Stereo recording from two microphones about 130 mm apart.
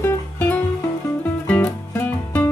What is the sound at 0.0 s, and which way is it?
Music, 15° left (ahead or behind).